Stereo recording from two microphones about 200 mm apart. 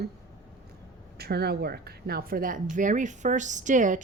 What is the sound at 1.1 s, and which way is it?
A woman's voice, 55° right (ahead or behind).